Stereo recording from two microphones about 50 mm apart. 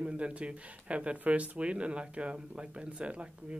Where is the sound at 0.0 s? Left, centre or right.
Right.